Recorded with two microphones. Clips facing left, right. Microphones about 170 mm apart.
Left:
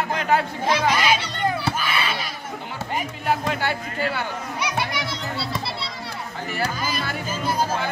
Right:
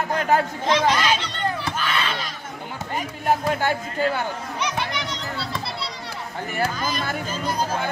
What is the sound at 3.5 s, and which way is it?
Speech, 45° right (ahead or behind).